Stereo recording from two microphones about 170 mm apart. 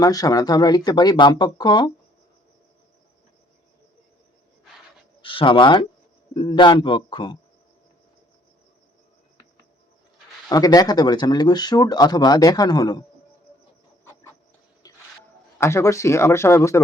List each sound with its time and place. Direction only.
0.0 s speech: 20° left (ahead or behind)
5.2 s speech: 30° left (ahead or behind)
10.5 s speech: 20° left (ahead or behind)
14.8 s music: 20° left (ahead or behind)
15.5 s speech: 15° left (ahead or behind)